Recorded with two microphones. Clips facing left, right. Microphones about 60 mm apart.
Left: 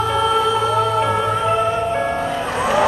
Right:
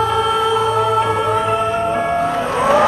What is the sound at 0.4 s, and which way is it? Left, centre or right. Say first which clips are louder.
Music: right 2 dB; right.